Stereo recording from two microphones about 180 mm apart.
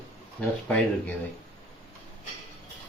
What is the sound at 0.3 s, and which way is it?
Speech, 5° left (ahead or behind).